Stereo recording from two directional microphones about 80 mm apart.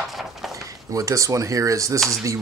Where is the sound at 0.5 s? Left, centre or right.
Right.